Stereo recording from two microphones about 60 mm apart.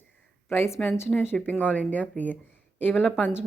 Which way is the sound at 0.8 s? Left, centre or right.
Centre.